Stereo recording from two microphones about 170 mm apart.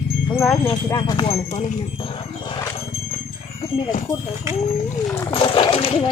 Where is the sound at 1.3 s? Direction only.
40° left (ahead or behind).